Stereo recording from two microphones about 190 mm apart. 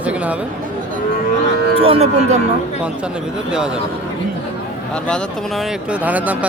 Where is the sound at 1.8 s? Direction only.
30° right (ahead or behind).